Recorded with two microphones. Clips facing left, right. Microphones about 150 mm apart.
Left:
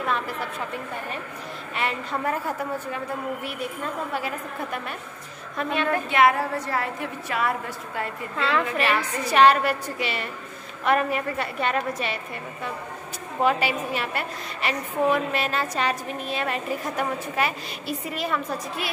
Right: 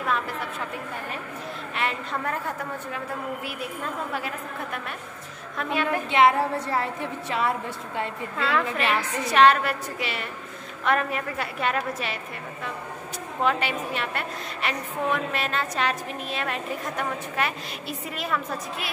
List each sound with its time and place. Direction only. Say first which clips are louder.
1.8 s a woman's voice: left 2 dB; centre (ahead or behind)
5.6 s a woman's voice: left 1 dB; 5° right (ahead or behind)
6.0 s a woman's voice: right 2 dB; 25° right (ahead or behind)
8.4 s a woman's voice: left 1 dB; centre (ahead or behind)
13.4 s a woman's voice: left 3 dB; 5° left (ahead or behind)